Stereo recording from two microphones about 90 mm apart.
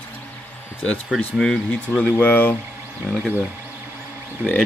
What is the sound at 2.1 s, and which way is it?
Speech, 20° left (ahead or behind).